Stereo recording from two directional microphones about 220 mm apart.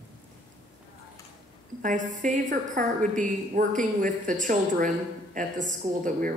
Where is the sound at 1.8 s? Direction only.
35° right (ahead or behind).